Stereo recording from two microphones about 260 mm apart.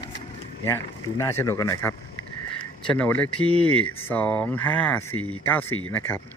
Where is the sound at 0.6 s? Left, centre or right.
Centre.